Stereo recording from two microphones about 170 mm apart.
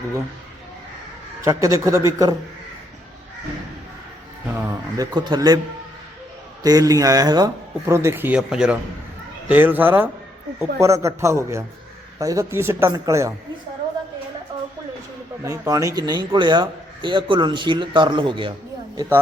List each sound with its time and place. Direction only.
1.5 s a man's voice: 20° right (ahead or behind)
4.4 s a man's voice: 15° right (ahead or behind)
6.6 s a man's voice: 20° right (ahead or behind)
15.4 s a man's voice: 20° right (ahead or behind)